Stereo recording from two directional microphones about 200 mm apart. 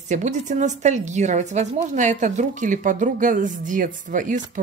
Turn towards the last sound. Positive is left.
turn(degrees=-40)  # may be behind; listen again after turning